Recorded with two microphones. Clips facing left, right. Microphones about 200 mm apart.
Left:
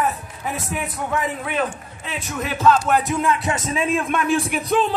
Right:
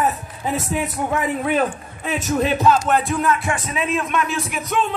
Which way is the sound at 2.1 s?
40° right (ahead or behind).